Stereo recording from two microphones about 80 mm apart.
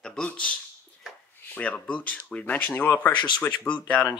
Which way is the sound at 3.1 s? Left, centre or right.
Left.